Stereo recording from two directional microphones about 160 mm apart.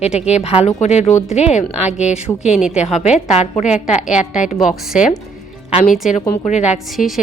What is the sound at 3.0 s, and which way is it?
A woman's voice, 50° left (ahead or behind).